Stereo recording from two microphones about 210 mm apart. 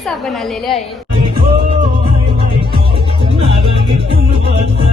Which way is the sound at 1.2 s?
25° right (ahead or behind).